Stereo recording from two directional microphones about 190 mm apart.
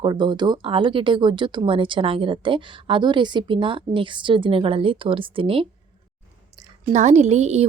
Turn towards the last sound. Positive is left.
turn(degrees=-35)  # may be behind; listen again after turning